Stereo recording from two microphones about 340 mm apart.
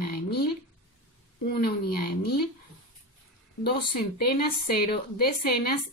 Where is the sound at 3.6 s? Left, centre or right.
Left.